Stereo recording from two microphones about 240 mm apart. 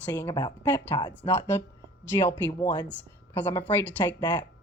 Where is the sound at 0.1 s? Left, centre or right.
Centre.